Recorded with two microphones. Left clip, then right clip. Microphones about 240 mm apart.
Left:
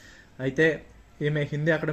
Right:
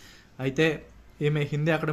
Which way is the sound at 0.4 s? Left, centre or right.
Right.